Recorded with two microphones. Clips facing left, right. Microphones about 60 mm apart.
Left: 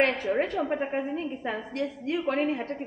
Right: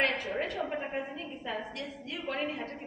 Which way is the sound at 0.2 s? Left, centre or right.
Left.